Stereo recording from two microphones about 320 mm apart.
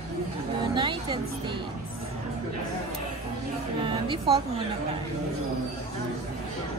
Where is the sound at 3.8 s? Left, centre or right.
Centre.